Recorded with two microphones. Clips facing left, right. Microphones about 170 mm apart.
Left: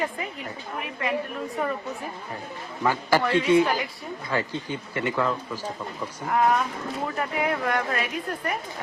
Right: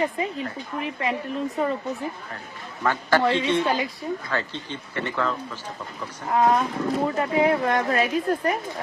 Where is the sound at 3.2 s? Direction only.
25° right (ahead or behind).